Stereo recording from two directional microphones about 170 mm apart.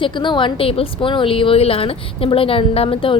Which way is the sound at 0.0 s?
30° left (ahead or behind).